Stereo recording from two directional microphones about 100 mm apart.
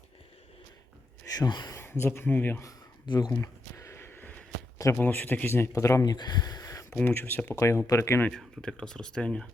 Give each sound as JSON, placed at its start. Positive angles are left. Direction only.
{"t": 1.3, "sound": "speech", "side_deg": 45}
{"t": 1.7, "sound": "speech", "side_deg": 25}
{"t": 3.1, "sound": "speech", "side_deg": 40}
{"t": 3.4, "sound": "a sound", "side_deg": 25}
{"t": 4.9, "sound": "speech", "side_deg": 15}
{"t": 5.7, "sound": "speech", "side_deg": 35}
{"t": 6.9, "sound": "speech", "side_deg": 20}
{"t": 8.3, "sound": "speech", "side_deg": 5}